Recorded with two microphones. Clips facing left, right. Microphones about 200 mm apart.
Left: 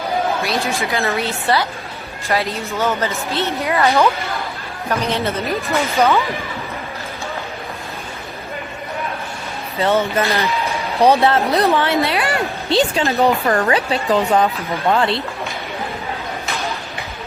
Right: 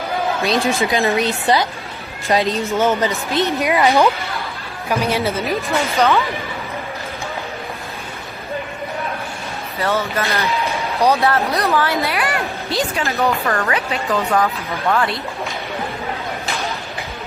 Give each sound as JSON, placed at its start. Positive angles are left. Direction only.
{"t": 0.4, "sound": "a woman's voice", "side_deg": -15}
{"t": 9.8, "sound": "a woman's voice", "side_deg": 20}